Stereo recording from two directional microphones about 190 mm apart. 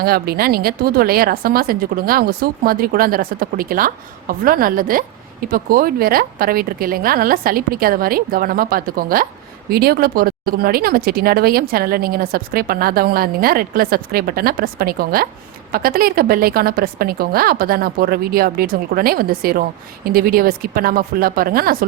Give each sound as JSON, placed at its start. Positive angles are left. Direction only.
{"t": 0.0, "sound": "a woman's voice", "side_deg": -55}